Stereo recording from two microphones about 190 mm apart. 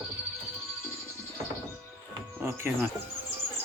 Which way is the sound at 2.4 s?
10° right (ahead or behind).